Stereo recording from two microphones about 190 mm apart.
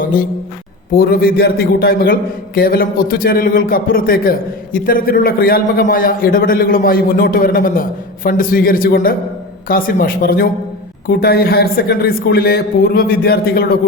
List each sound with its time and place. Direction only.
0.9 s a man's voice: 50° left (ahead or behind)